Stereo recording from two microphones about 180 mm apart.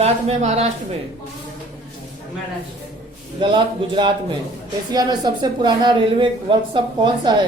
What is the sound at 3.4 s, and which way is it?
Speech, 25° right (ahead or behind).